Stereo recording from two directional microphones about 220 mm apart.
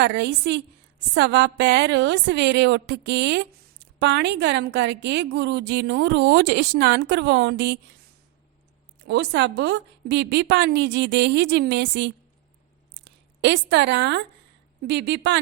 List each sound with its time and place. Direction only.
0.0 s a woman's voice: 50° right (ahead or behind)
9.0 s a woman's voice: 50° right (ahead or behind)